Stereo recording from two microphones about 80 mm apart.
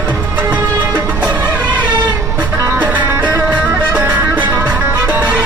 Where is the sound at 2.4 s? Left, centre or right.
Right.